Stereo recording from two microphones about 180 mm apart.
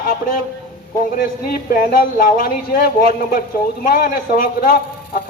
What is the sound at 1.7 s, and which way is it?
A man's voice, 50° left (ahead or behind).